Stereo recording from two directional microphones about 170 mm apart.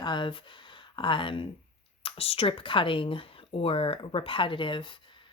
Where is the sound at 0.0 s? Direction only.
25° left (ahead or behind).